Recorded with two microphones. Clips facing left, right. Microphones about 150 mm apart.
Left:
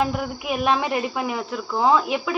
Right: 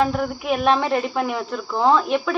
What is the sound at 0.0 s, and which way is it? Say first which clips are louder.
Speech: right 3 dB; 5° left (ahead or behind).